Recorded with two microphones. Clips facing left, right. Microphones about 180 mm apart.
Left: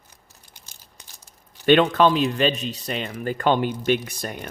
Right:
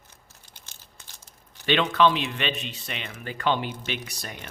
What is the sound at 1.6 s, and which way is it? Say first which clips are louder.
Speech: left 5 dB; 50° left (ahead or behind).